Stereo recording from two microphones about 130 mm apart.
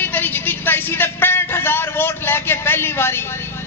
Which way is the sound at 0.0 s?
15° left (ahead or behind).